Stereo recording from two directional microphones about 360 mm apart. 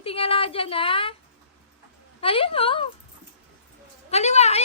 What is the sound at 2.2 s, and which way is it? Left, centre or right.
Speech, centre.